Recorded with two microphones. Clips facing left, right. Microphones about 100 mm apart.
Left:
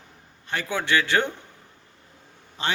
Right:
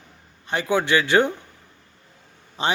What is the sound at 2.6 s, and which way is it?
Speech, 20° right (ahead or behind).